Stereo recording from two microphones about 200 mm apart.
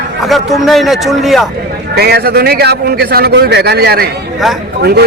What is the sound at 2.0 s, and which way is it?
A man's voice, 55° right (ahead or behind).